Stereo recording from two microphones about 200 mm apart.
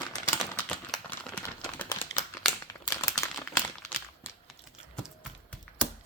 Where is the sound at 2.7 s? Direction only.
15° left (ahead or behind).